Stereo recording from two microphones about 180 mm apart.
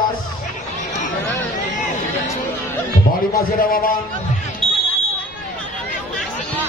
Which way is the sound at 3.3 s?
50° left (ahead or behind).